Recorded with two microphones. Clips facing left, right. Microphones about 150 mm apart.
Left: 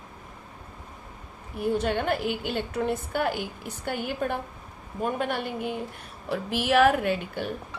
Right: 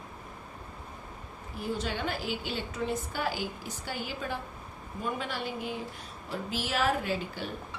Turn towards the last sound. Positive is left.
turn(degrees=60)  # may be behind; listen again after turning